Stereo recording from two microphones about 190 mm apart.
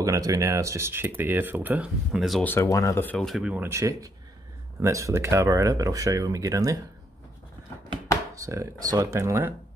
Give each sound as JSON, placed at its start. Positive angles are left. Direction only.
{"t": 0.0, "sound": "speech", "side_deg": -15}
{"t": 2.5, "sound": "speech", "side_deg": 15}
{"t": 8.4, "sound": "speech", "side_deg": -15}